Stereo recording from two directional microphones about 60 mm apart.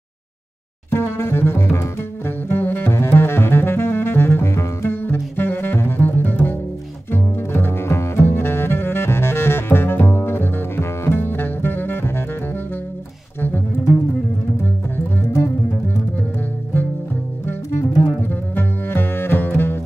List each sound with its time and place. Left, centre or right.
0.9 s double bass: left
5.0 s music: left
7.1 s double bass: left
17.5 s double bass: left